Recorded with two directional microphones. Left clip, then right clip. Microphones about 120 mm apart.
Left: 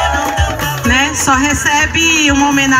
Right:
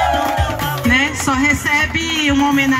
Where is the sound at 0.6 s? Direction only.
50° left (ahead or behind).